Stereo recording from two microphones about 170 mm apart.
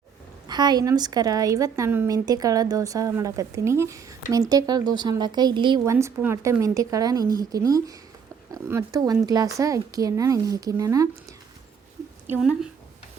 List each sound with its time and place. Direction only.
0.4 s a woman's voice: 25° right (ahead or behind)
12.3 s speech: 5° right (ahead or behind)